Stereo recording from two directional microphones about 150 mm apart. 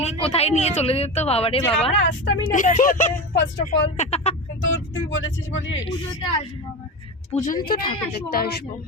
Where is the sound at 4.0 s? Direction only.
45° left (ahead or behind).